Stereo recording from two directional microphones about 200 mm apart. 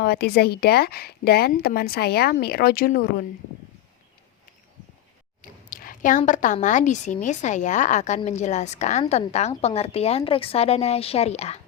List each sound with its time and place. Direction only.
0.0 s speech: 50° left (ahead or behind)
5.4 s a woman's voice: 45° left (ahead or behind)